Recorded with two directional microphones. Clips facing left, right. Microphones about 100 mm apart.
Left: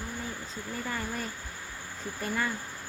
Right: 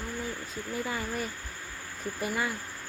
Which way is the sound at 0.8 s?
5° right (ahead or behind).